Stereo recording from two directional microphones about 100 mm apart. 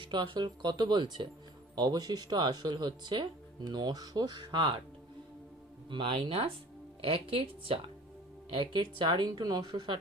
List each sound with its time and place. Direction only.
0.0 s speech: 55° right (ahead or behind)
5.9 s speech: 55° right (ahead or behind)
8.5 s speech: 55° right (ahead or behind)